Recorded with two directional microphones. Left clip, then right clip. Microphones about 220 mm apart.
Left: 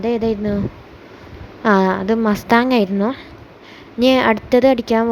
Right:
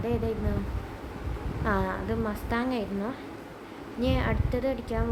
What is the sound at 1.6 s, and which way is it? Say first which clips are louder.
A woman's voice: left 14 dB; 35° left (ahead or behind).